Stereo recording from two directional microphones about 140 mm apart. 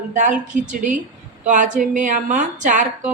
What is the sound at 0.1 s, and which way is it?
A woman's voice, 60° right (ahead or behind).